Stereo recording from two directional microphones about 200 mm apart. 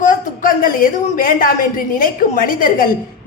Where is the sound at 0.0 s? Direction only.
40° left (ahead or behind).